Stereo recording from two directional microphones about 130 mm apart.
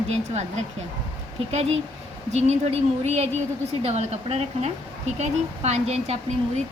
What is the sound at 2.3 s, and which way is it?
A woman's voice, 60° right (ahead or behind).